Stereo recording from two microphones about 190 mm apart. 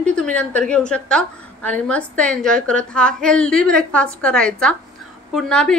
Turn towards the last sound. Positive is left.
turn(degrees=5)  # may be behind; listen again after turning